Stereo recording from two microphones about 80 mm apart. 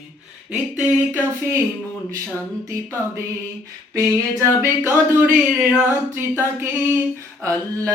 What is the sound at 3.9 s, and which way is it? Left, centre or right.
Singing, right.